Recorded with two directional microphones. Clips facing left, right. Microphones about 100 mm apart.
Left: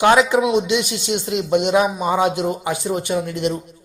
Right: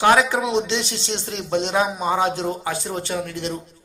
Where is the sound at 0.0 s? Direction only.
20° left (ahead or behind).